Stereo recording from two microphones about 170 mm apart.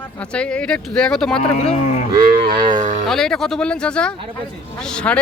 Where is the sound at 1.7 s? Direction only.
45° left (ahead or behind).